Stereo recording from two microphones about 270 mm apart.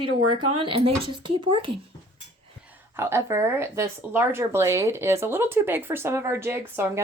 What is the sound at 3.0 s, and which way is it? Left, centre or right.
Speech, centre.